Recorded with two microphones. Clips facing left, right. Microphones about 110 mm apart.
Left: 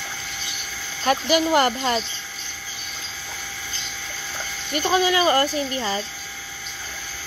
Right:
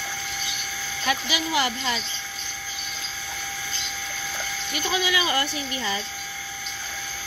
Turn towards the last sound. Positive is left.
turn(degrees=35)  # may be behind; listen again after turning